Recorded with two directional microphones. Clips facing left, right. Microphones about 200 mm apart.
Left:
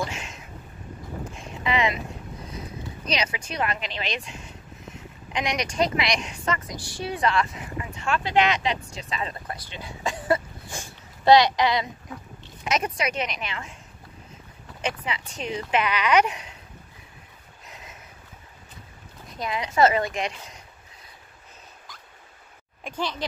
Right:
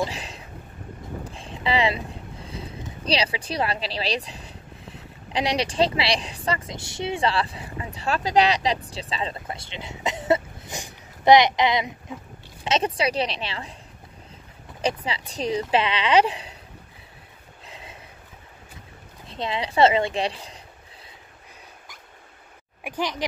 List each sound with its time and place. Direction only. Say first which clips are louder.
0.1 s a sound: right 1 dB; 35° right (ahead or behind)
2.4 s speech: right 1 dB; 30° right (ahead or behind)
12.6 s speech: right 3 dB; 30° right (ahead or behind)
14.8 s speech: right 4 dB; 35° right (ahead or behind)
17.6 s boat: right 2 dB; 30° right (ahead or behind)
19.2 s speech: right 2 dB; 25° right (ahead or behind)
22.8 s speech: right 2 dB; 15° right (ahead or behind)